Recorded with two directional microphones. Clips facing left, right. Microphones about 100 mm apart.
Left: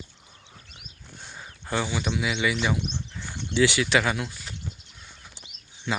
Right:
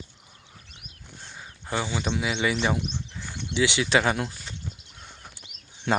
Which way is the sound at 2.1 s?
35° right (ahead or behind).